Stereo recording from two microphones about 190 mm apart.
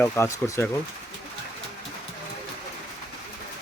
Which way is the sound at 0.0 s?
15° left (ahead or behind).